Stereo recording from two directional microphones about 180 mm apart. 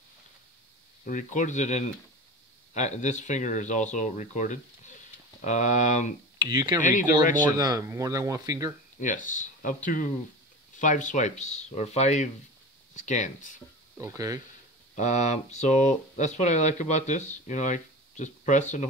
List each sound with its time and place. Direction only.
1.0 s speech: 45° left (ahead or behind)
6.3 s speech: 25° right (ahead or behind)
6.8 s speech: 45° left (ahead or behind)
7.5 s speech: 20° right (ahead or behind)
9.0 s speech: 45° left (ahead or behind)
10.8 s speech: 45° left (ahead or behind)
13.9 s speech: 15° right (ahead or behind)
15.0 s speech: 40° left (ahead or behind)